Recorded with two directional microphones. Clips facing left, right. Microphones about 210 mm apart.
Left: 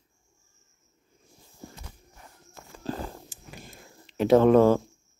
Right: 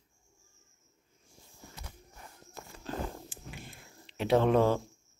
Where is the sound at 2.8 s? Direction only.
40° left (ahead or behind).